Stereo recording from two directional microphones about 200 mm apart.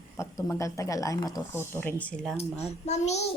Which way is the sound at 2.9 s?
35° left (ahead or behind).